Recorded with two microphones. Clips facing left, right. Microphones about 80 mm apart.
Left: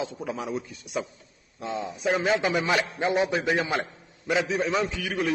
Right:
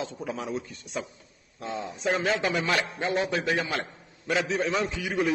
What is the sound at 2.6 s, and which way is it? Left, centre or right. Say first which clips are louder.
A man's voice: left 2 dB; centre.